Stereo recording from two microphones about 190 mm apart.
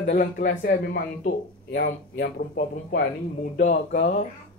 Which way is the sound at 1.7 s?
65° left (ahead or behind).